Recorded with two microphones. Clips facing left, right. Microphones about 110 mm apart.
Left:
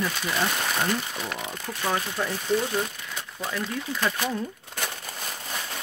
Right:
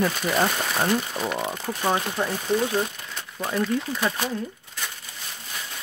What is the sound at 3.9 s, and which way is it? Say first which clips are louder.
Speech: right 1 dB; 15° right (ahead or behind).